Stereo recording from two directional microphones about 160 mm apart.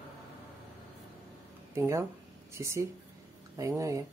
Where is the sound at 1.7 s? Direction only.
15° right (ahead or behind).